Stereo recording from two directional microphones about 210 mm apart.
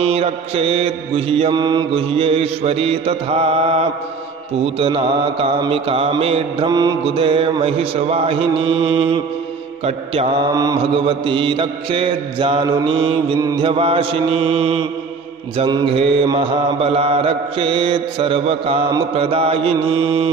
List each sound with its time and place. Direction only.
0.0 s mantra: 30° right (ahead or behind)
10.5 s mantra: 15° right (ahead or behind)